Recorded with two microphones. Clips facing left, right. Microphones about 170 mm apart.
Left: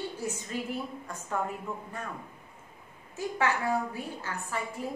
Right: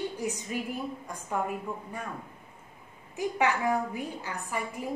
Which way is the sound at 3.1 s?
15° right (ahead or behind).